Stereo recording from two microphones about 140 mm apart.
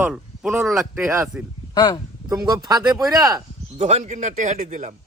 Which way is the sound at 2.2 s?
30° right (ahead or behind).